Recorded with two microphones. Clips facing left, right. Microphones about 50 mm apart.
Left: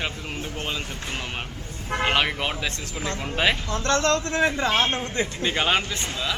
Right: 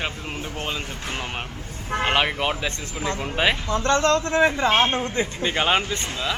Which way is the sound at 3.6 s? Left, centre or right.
Right.